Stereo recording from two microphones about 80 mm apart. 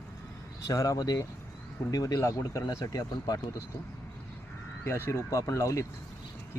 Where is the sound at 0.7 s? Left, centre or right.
Left.